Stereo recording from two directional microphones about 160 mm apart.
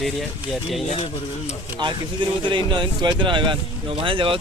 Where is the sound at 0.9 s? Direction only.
45° left (ahead or behind).